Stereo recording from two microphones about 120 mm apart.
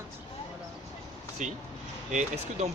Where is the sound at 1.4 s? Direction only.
90° right.